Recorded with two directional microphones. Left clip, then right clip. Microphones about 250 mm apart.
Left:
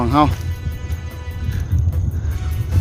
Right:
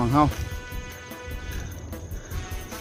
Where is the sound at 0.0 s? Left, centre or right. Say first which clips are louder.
Left 6 dB; left.